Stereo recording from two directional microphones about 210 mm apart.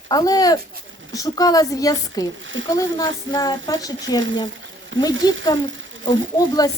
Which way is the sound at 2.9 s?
20° left (ahead or behind).